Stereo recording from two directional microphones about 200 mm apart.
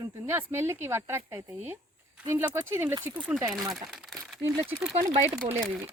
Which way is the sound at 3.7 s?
Centre (ahead or behind).